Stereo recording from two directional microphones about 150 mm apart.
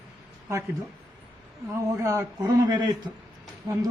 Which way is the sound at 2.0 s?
20° right (ahead or behind).